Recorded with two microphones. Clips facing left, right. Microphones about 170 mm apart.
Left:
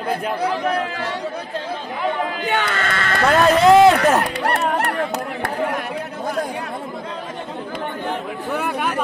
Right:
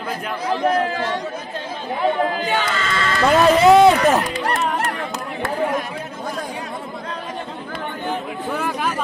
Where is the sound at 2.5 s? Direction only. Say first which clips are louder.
Even; 60° left (ahead or behind).